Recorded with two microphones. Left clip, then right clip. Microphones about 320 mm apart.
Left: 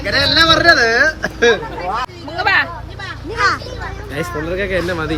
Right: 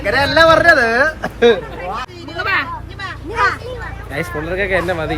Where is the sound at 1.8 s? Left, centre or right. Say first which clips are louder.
Left 3 dB; left.